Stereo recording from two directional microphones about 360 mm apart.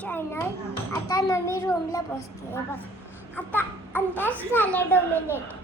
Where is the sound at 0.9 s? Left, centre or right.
Centre.